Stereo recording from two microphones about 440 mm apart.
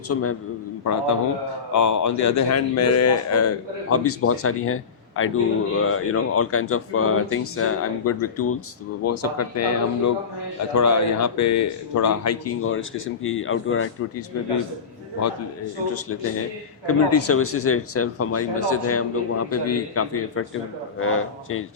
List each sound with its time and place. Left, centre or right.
0.1 s speech: left
16.8 s speech: left